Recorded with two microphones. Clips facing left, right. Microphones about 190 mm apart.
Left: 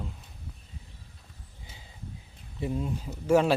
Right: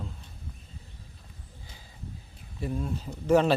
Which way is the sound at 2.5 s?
20° left (ahead or behind).